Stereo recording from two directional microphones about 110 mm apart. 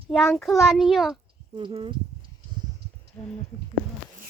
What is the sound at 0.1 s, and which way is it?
A child's voice, 5° left (ahead or behind).